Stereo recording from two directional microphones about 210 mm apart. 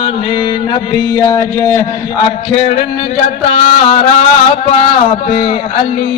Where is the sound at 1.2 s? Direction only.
15° left (ahead or behind).